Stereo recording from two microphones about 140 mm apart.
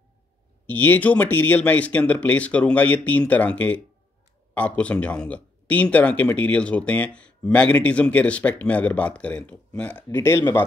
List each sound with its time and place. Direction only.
0.7 s speech: 10° left (ahead or behind)